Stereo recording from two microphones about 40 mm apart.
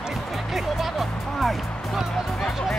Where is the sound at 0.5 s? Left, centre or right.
Centre.